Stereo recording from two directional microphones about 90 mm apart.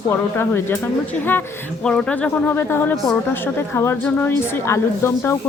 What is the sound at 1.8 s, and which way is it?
A woman's voice, 10° left (ahead or behind).